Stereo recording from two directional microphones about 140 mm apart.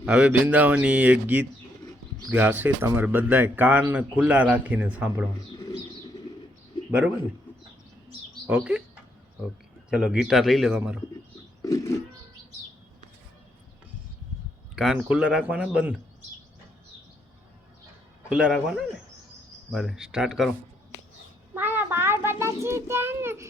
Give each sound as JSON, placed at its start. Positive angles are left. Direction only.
{"t": 0.0, "sound": "speech", "side_deg": -5}
{"t": 8.4, "sound": "speech", "side_deg": -10}
{"t": 9.9, "sound": "a man's voice", "side_deg": -5}
{"t": 11.6, "sound": "a sound", "side_deg": 25}
{"t": 14.8, "sound": "speech", "side_deg": -5}
{"t": 18.3, "sound": "a man's voice", "side_deg": -5}
{"t": 21.5, "sound": "a child's voice", "side_deg": -15}